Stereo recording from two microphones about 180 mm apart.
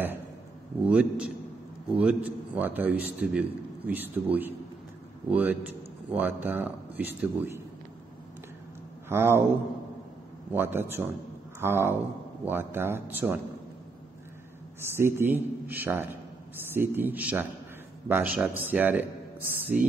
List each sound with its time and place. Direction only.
0.8 s a man's voice: 5° right (ahead or behind)
9.1 s a man's voice: 15° right (ahead or behind)
10.5 s a man's voice: 10° right (ahead or behind)
14.8 s a man's voice: 15° right (ahead or behind)